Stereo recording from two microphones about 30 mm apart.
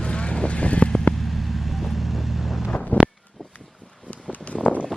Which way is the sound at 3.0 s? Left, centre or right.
Left.